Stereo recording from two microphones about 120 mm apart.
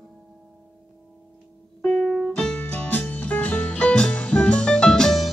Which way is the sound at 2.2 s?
5° left (ahead or behind).